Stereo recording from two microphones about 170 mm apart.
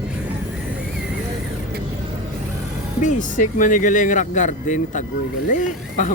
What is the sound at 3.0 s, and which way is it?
Speech, 45° left (ahead or behind).